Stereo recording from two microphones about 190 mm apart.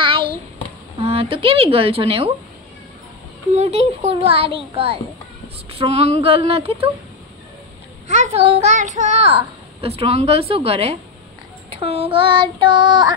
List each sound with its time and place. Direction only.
0.0 s hands: 25° right (ahead or behind)
0.9 s speech: 30° right (ahead or behind)
3.5 s a child's voice: 35° right (ahead or behind)
6.2 s child singing: 30° right (ahead or behind)
8.1 s a child's voice: 35° right (ahead or behind)
11.7 s child singing: 30° right (ahead or behind)